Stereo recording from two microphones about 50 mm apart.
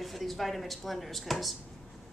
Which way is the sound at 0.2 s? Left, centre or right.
Centre.